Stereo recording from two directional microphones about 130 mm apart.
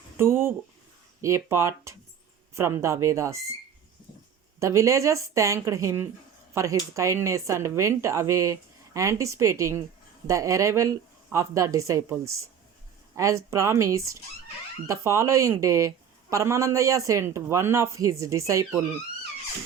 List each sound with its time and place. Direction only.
0.2 s speech: 20° right (ahead or behind)
4.6 s speech: 25° right (ahead or behind)